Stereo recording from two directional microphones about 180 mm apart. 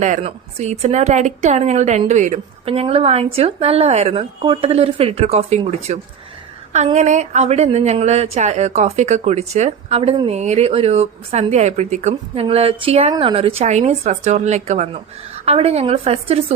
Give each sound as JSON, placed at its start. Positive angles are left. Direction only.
{"t": 0.0, "sound": "speech", "side_deg": -40}